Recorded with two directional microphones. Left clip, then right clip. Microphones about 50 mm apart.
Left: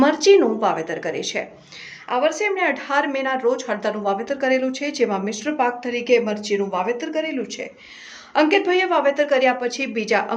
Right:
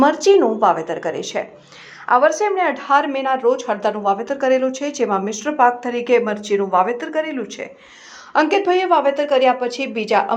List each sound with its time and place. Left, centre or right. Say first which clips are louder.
0.0 s speech: right 1 dB; right
2.0 s a woman's voice: right 6 dB; right
2.6 s speech: right 4 dB; right
3.7 s a woman's voice: right 4 dB; right
6.5 s speech: right 8 dB; right
6.9 s a man's voice: right 3 dB; right
8.3 s speech: right 2 dB; right